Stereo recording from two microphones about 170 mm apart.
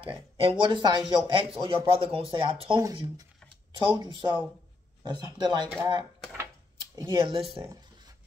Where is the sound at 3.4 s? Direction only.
10° left (ahead or behind).